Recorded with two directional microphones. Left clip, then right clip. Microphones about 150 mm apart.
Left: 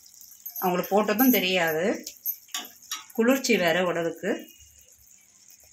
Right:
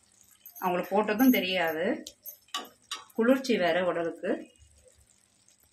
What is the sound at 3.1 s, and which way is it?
Speech, 55° left (ahead or behind).